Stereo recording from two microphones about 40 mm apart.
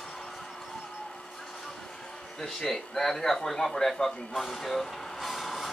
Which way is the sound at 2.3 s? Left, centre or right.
Centre.